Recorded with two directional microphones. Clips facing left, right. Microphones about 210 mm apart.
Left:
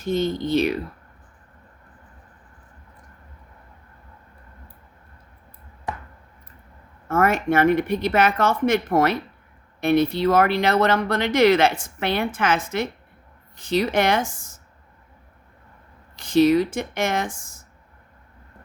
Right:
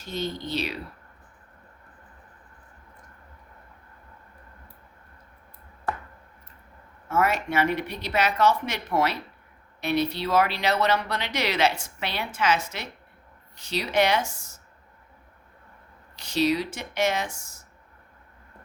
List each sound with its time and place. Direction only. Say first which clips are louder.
0.0 s speech: left 9 dB; 50° left (ahead or behind)
7.1 s speech: left 5 dB; 50° left (ahead or behind)
16.1 s speech: left 8 dB; 50° left (ahead or behind)